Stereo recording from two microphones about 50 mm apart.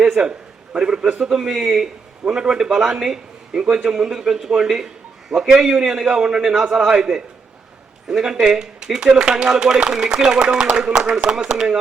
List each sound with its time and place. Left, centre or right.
0.0 s a man's voice: centre
1.3 s speech: centre